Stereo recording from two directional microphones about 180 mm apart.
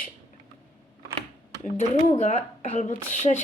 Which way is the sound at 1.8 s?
40° left (ahead or behind).